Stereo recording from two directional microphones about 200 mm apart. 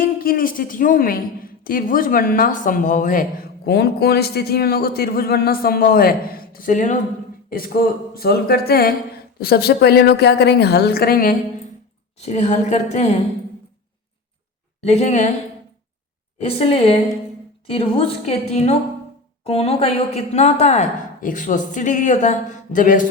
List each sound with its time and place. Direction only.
0.0 s a woman's voice: 45° left (ahead or behind)
12.1 s a woman's voice: 35° left (ahead or behind)
14.8 s a woman's voice: 35° left (ahead or behind)
16.4 s a woman's voice: 30° left (ahead or behind)